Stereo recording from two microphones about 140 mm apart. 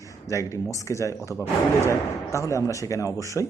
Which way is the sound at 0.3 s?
20° left (ahead or behind).